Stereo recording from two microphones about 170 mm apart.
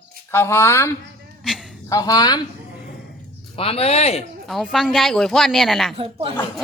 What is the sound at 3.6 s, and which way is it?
Speech, 35° left (ahead or behind).